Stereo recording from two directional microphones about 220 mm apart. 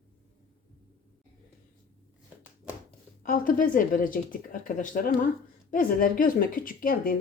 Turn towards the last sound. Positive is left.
turn(degrees=40)  # may be behind; listen again after turning